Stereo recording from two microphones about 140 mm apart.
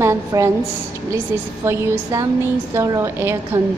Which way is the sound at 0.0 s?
20° right (ahead or behind).